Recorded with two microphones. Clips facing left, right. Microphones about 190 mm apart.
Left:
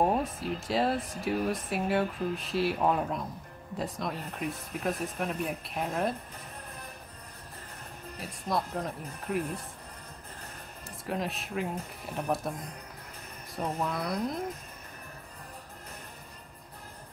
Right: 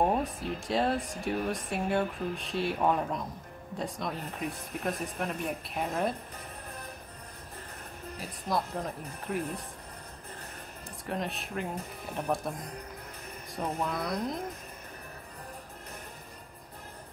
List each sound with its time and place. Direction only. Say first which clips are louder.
0.0 s speech: left 1 dB; centre (ahead or behind)
8.2 s speech: even; centre (ahead or behind)
11.1 s speech: left 1 dB; centre (ahead or behind)
13.6 s speech: even; centre (ahead or behind)